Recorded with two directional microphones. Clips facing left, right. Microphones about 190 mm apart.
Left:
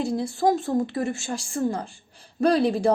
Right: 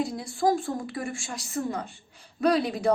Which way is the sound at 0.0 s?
25° left (ahead or behind).